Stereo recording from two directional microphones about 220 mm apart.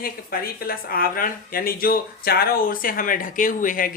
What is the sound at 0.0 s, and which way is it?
Speech, 40° left (ahead or behind).